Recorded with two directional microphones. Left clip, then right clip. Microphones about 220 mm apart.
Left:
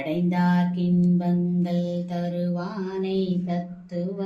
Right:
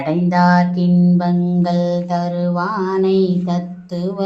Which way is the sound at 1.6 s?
50° right (ahead or behind).